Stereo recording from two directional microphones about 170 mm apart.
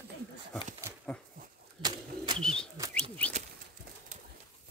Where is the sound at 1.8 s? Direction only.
30° right (ahead or behind).